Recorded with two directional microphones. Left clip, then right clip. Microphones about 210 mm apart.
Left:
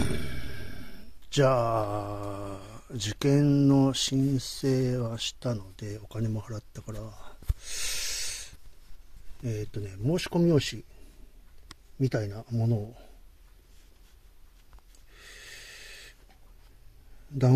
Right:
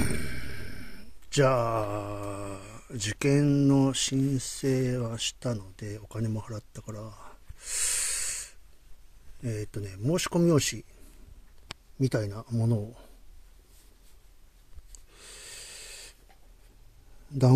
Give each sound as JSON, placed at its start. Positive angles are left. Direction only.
{"t": 0.0, "sound": "speech", "side_deg": -10}
{"t": 9.4, "sound": "speech", "side_deg": -5}
{"t": 12.0, "sound": "speech", "side_deg": -20}
{"t": 15.1, "sound": "wheeze", "side_deg": -20}